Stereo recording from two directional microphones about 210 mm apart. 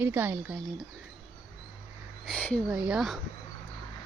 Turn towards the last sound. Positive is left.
turn(degrees=0)  # may be behind; listen again after turning